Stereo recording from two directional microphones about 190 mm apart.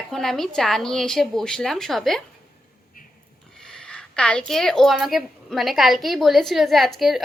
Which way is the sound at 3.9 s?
5° left (ahead or behind).